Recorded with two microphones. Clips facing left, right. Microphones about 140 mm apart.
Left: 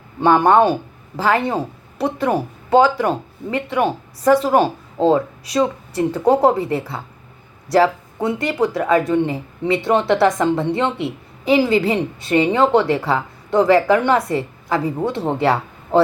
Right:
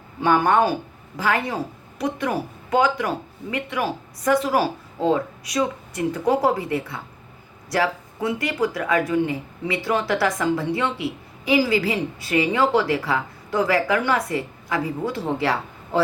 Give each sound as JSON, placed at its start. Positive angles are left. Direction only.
{"t": 0.2, "sound": "speech", "side_deg": 30}
{"t": 10.3, "sound": "a woman's voice", "side_deg": 55}
{"t": 11.4, "sound": "a woman's voice", "side_deg": 25}